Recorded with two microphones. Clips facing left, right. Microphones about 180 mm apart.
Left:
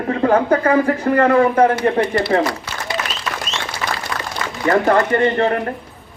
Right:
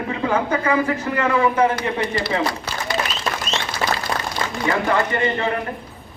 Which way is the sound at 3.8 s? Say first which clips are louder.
Right 2 dB; 35° right (ahead or behind).